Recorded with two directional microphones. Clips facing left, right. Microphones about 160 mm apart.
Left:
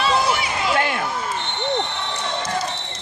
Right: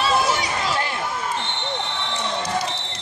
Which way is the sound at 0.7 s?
65° left (ahead or behind).